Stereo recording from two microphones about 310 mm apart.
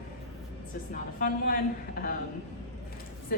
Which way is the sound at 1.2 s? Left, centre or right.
Left.